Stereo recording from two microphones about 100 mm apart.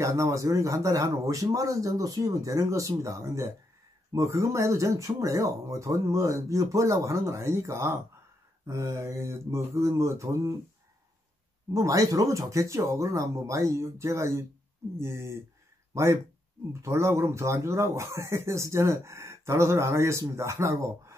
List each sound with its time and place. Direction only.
0.0 s speech: 30° right (ahead or behind)
11.7 s speech: 35° right (ahead or behind)